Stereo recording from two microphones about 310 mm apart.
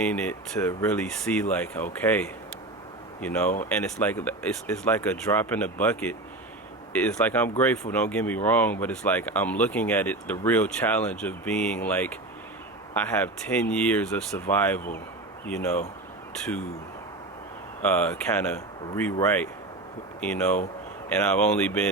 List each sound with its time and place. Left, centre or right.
0.0 s speech: centre
3.5 s speech: left
4.0 s speech: centre
17.8 s speech: centre